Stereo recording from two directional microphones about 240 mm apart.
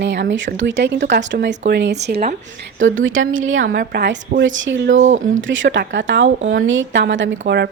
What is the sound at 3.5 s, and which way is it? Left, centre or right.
A woman's voice, right.